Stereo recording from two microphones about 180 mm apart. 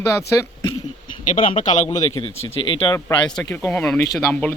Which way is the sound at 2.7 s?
25° left (ahead or behind).